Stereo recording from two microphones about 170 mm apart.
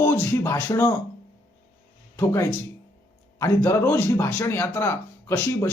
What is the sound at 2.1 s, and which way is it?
Speech, 15° left (ahead or behind).